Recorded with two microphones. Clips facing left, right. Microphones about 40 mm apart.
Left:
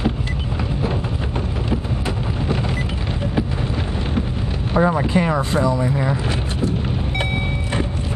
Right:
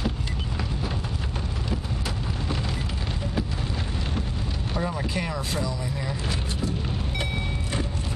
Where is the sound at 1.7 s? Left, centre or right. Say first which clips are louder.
Left 7 dB; left.